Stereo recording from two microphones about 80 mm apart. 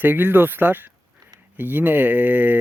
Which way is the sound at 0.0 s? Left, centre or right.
Right.